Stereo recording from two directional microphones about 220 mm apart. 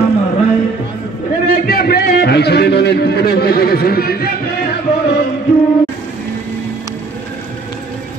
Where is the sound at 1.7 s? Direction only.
45° left (ahead or behind).